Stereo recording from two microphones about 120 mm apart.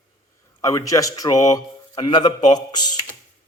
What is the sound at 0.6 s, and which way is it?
Speech, 30° left (ahead or behind).